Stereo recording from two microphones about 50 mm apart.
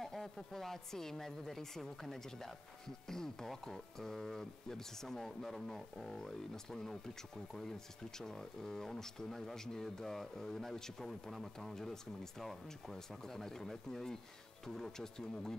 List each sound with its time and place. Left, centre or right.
0.0 s speech: centre
8.2 s speech: centre